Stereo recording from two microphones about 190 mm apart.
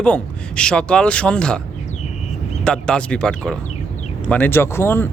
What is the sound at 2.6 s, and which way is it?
Speech, 5° left (ahead or behind).